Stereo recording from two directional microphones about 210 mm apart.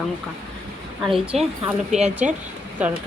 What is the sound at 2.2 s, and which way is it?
Speech, 35° right (ahead or behind).